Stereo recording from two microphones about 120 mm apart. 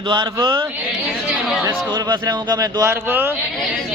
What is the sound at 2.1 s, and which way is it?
A man's voice, 35° right (ahead or behind).